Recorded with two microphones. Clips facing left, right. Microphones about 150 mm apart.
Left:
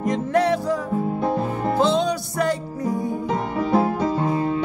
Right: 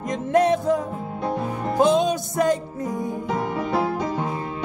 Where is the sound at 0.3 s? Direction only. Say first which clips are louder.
Right 3 dB; 20° right (ahead or behind).